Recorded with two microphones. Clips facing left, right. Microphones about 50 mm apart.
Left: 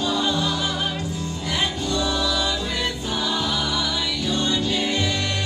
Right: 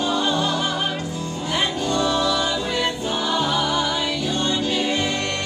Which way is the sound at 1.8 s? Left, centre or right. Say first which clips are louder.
Right 3 dB; right.